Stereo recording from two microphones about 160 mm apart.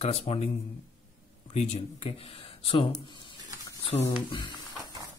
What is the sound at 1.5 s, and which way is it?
Speech, 45° left (ahead or behind).